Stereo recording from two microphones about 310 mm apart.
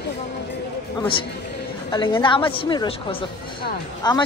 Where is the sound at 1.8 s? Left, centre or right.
Centre.